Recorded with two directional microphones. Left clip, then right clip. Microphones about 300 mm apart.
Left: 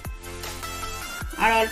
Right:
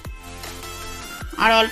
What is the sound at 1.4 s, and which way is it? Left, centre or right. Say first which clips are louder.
Speech: right 4 dB; centre.